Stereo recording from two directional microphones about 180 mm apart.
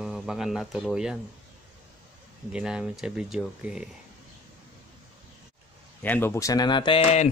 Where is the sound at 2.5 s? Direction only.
5° right (ahead or behind).